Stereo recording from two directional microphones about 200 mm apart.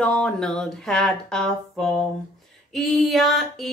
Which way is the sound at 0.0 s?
5° left (ahead or behind).